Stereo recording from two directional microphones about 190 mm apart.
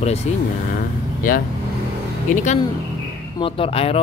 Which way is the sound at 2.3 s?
45° left (ahead or behind).